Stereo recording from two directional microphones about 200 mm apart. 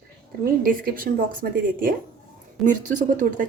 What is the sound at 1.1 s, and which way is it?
Speech, 50° right (ahead or behind).